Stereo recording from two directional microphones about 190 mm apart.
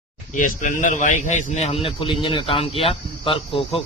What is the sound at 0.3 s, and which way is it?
A man's voice, 45° left (ahead or behind).